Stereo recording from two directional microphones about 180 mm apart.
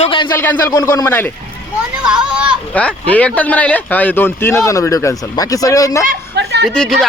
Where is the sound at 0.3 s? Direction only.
15° left (ahead or behind).